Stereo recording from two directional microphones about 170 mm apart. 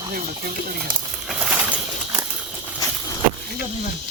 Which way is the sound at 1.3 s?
10° right (ahead or behind).